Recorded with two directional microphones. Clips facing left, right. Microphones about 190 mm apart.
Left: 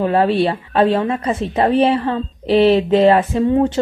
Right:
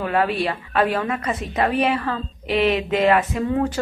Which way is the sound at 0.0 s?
30° left (ahead or behind).